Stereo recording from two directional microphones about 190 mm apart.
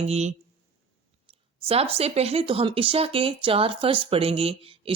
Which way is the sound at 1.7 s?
30° right (ahead or behind).